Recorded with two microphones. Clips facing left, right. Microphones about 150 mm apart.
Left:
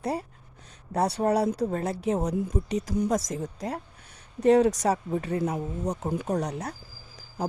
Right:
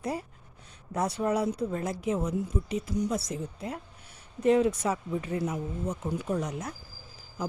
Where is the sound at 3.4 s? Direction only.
40° left (ahead or behind).